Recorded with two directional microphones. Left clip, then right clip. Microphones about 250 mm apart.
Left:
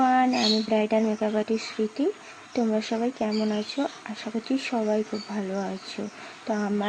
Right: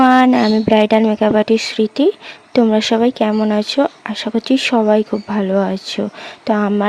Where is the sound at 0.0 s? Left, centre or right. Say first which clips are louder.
Right 11 dB; right.